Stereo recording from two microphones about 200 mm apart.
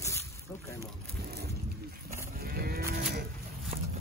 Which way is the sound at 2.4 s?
50° right (ahead or behind).